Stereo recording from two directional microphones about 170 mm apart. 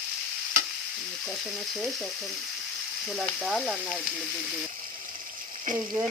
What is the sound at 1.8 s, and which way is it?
Frying, centre (ahead or behind).